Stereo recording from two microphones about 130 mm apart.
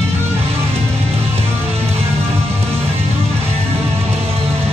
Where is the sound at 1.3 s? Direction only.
55° right (ahead or behind).